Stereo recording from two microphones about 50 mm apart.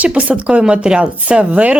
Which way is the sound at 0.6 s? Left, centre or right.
Centre.